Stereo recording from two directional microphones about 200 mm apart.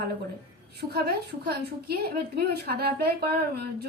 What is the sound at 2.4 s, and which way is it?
Speech, 50° right (ahead or behind).